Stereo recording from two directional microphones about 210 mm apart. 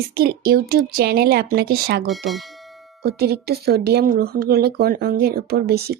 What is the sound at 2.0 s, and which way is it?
Speech, centre (ahead or behind).